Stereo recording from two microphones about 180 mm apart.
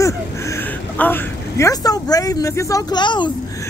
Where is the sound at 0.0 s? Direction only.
15° left (ahead or behind).